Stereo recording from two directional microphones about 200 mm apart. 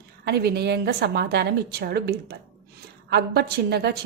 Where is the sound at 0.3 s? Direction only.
55° right (ahead or behind).